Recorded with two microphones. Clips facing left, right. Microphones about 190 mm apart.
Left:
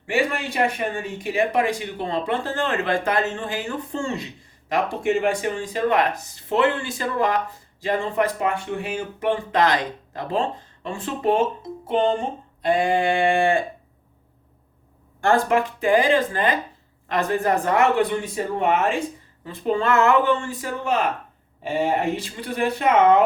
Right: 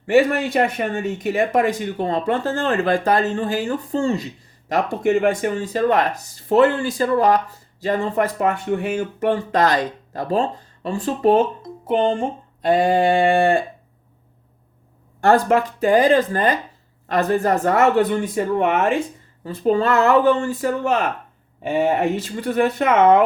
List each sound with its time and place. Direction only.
0.0 s speech: 45° right (ahead or behind)
12.6 s speech: 40° right (ahead or behind)
15.2 s speech: 40° right (ahead or behind)
19.6 s speech: 40° right (ahead or behind)
22.2 s speech: 45° right (ahead or behind)